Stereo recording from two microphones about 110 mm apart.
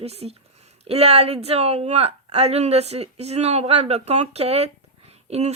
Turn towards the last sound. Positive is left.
turn(degrees=-80)